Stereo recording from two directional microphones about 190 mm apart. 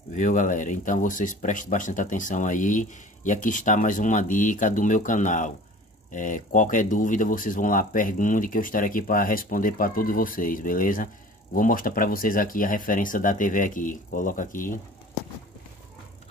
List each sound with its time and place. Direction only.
0.1 s speech: 40° left (ahead or behind)